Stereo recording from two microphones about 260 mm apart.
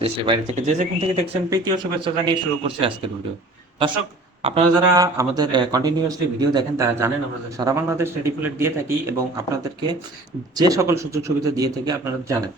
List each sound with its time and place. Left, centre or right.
0.0 s speech: right
1.5 s a man's voice: centre
10.5 s a man's voice: centre